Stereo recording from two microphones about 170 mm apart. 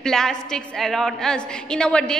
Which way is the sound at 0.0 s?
5° left (ahead or behind).